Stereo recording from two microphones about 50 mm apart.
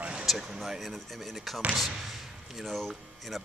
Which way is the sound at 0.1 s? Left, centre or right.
Centre.